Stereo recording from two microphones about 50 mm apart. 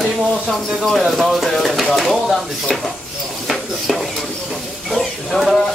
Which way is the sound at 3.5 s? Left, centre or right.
Centre.